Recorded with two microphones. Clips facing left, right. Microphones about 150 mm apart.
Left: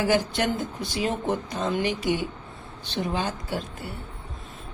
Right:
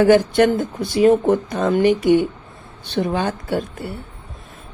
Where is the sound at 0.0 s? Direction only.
55° right (ahead or behind).